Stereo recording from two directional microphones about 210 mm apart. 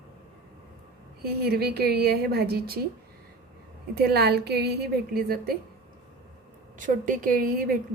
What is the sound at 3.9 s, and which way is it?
Speech, 50° right (ahead or behind).